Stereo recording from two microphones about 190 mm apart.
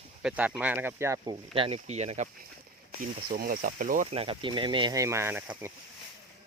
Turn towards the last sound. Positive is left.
turn(degrees=-10)  # may be behind; listen again after turning